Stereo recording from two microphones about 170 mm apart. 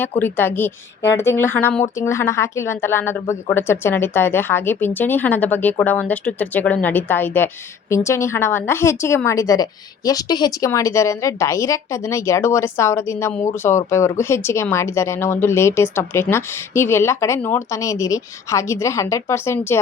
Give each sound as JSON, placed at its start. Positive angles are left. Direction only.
{"t": 0.2, "sound": "speech", "side_deg": 10}